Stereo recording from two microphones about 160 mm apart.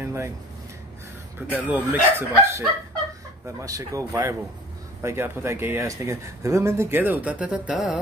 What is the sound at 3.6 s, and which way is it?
Speech, 20° right (ahead or behind).